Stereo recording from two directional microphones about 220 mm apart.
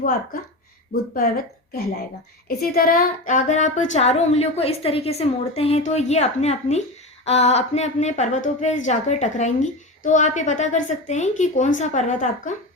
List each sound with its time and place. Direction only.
1.1 s a woman's voice: 40° left (ahead or behind)